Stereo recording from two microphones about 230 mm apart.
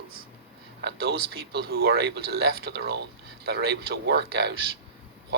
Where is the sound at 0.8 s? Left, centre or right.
Right.